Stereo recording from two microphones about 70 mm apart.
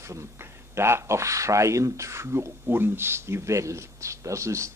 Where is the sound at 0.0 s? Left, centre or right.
Right.